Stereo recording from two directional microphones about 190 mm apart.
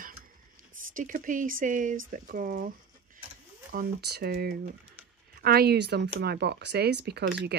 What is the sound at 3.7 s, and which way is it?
Speech, 55° right (ahead or behind).